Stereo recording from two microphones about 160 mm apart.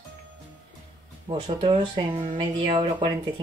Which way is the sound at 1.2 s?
30° right (ahead or behind).